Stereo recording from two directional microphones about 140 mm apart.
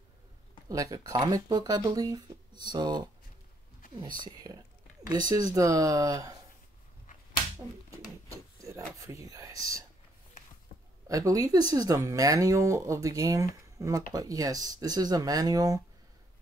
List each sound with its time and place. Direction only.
0.7 s speech: 25° right (ahead or behind)
4.4 s speech: 25° right (ahead or behind)
7.1 s whip: 75° left (ahead or behind)
8.5 s rub: 20° right (ahead or behind)
8.9 s speech: 20° right (ahead or behind)
11.1 s speech: 25° right (ahead or behind)